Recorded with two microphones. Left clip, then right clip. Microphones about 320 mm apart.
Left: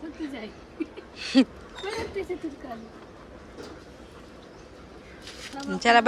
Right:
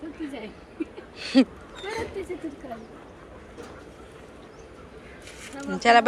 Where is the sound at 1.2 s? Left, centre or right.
Centre.